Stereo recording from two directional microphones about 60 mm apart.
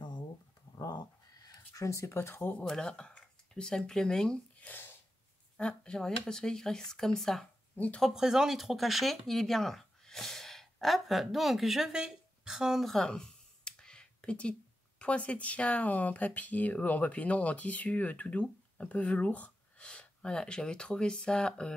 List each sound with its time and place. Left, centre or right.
1.7 s speech: left
2.0 s speech: left
2.6 s speech: centre
5.6 s speech: centre
7.7 s speech: left
8.1 s speech: centre
12.8 s clicking: centre
15.0 s speech: left